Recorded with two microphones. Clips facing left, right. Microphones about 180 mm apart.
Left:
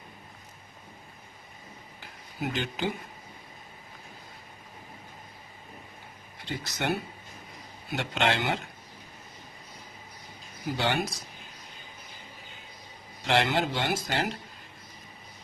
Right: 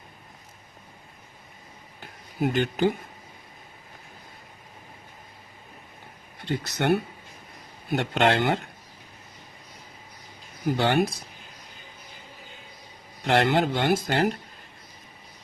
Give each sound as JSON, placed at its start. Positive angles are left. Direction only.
{"t": 2.0, "sound": "a sound", "side_deg": -55}
{"t": 6.4, "sound": "speech", "side_deg": -60}
{"t": 10.8, "sound": "speech", "side_deg": -55}
{"t": 13.2, "sound": "speech", "side_deg": -55}